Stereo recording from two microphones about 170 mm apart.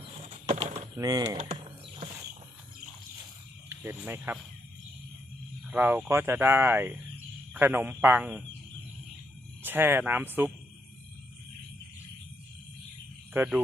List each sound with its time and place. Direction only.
0.0 s a sound: 40° right (ahead or behind)
0.9 s speech: 20° right (ahead or behind)
3.7 s speech: 15° right (ahead or behind)
5.7 s speech: 10° right (ahead or behind)
9.6 s speech: 10° right (ahead or behind)
13.3 s speech: 10° right (ahead or behind)